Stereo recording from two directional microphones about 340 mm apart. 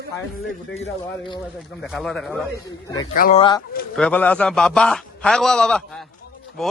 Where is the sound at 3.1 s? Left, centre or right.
Left.